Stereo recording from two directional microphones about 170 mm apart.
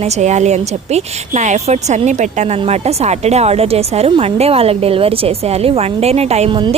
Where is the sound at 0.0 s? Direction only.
40° right (ahead or behind).